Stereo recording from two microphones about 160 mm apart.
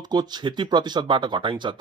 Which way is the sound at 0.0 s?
25° right (ahead or behind).